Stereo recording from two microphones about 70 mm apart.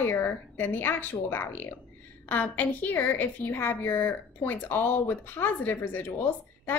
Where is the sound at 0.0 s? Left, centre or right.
Left.